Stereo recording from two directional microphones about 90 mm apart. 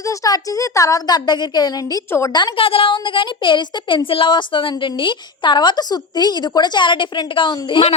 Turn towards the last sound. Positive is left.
turn(degrees=65)  # may be behind; listen again after turning